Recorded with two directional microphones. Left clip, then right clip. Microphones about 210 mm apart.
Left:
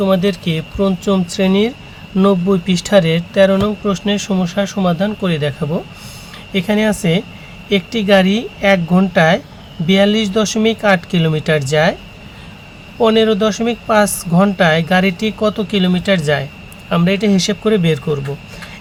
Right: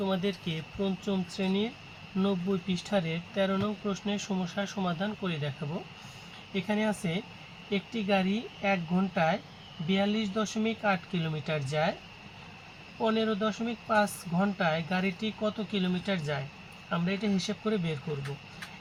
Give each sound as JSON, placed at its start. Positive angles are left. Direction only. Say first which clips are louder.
{"t": 0.0, "sound": "speech", "louder": "left 17 dB", "side_deg": 35}
{"t": 6.5, "sound": "speech", "louder": "left 15 dB", "side_deg": 40}
{"t": 13.0, "sound": "speech", "louder": "left 17 dB", "side_deg": 40}